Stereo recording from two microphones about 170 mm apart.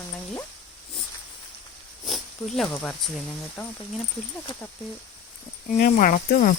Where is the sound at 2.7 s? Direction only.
10° left (ahead or behind).